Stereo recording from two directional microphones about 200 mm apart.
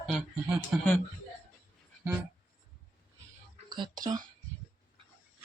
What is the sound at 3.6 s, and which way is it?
Speech, 20° right (ahead or behind).